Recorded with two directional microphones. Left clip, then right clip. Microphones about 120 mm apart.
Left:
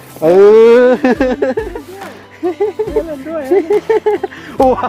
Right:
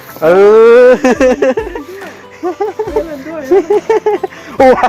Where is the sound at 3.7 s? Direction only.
20° left (ahead or behind).